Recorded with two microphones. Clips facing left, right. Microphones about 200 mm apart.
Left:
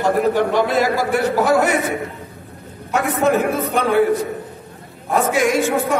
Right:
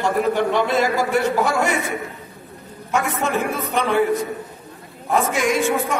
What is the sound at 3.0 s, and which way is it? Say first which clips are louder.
A man's voice: left 5 dB; 50° left (ahead or behind).